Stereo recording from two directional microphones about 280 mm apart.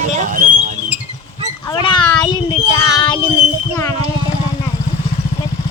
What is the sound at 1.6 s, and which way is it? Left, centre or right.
Child singing, centre.